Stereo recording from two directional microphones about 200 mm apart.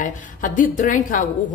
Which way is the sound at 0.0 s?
40° left (ahead or behind).